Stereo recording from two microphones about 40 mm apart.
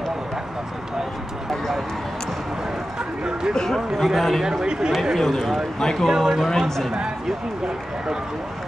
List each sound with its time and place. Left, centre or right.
3.5 s speech: centre
4.0 s speech: centre
4.5 s speech: centre
5.1 s speech: centre
6.0 s speech: centre